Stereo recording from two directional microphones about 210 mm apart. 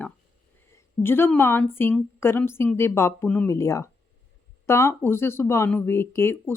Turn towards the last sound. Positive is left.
turn(degrees=10)  # may be behind; listen again after turning